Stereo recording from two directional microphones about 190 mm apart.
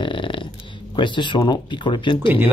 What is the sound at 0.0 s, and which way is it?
Burping, 25° left (ahead or behind).